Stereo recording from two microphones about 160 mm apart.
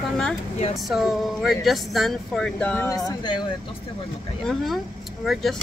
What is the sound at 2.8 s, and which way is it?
Speech, 20° left (ahead or behind).